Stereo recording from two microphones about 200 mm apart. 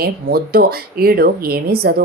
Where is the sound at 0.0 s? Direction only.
50° right (ahead or behind).